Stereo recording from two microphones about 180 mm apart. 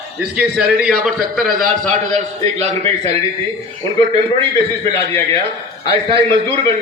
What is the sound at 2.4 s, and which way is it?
Speech, 40° right (ahead or behind).